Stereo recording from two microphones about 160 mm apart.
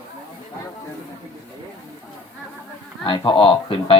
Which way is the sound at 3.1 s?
30° left (ahead or behind).